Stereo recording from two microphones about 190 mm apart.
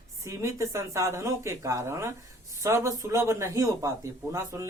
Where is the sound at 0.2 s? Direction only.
15° right (ahead or behind).